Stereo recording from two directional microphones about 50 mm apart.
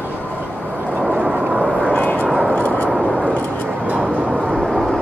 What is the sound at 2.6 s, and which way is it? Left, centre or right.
Vehicle, left.